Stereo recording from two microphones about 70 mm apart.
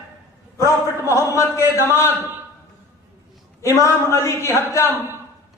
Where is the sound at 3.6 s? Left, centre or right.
Left.